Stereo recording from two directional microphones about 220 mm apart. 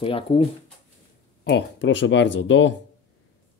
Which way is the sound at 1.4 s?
55° left (ahead or behind).